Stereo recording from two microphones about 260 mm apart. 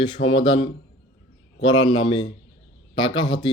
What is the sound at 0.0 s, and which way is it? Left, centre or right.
Speech, centre.